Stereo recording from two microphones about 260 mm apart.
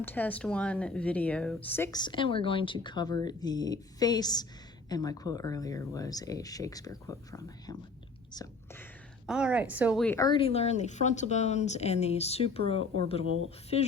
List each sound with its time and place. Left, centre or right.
0.0 s speech: centre
9.2 s speech: centre
10.2 s speech: centre